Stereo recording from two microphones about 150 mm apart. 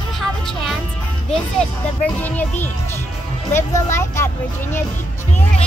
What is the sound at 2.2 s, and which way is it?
Speech, 10° left (ahead or behind).